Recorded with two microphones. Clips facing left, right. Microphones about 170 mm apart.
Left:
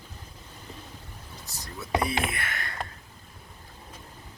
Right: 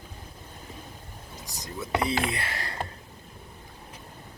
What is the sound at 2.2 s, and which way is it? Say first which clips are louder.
Speech: right 2 dB; 30° right (ahead or behind).